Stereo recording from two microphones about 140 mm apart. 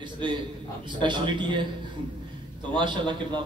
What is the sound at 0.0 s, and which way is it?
A man's voice, 35° right (ahead or behind).